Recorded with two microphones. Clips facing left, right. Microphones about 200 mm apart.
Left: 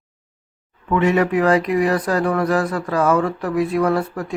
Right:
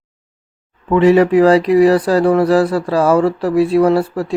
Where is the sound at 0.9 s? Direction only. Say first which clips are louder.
Right 7 dB; 30° right (ahead or behind).